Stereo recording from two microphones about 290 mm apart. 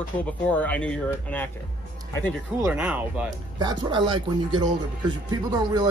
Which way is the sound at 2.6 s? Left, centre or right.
Centre.